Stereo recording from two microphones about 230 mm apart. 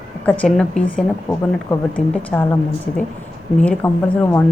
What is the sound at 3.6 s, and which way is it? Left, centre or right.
Speech, centre.